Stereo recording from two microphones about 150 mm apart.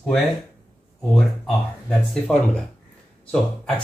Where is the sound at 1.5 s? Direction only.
5° left (ahead or behind).